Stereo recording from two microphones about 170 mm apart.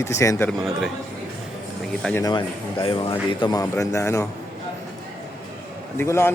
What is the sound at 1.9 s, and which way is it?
Speech, 5° left (ahead or behind).